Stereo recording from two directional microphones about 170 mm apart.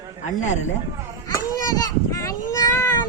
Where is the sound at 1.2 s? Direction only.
20° left (ahead or behind).